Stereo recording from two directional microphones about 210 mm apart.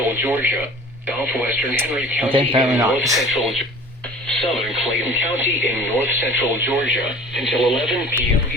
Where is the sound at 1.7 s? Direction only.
10° right (ahead or behind).